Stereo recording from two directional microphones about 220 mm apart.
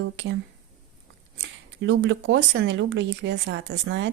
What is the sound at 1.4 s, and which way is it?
Speech, 55° right (ahead or behind).